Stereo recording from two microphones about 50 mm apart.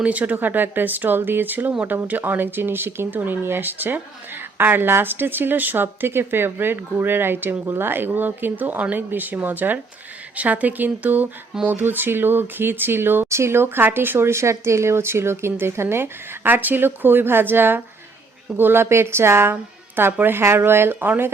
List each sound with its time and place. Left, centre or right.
0.0 s speech: right
0.3 s speech: right
13.3 s a woman's voice: right
20.0 s speech: right
20.4 s speech: right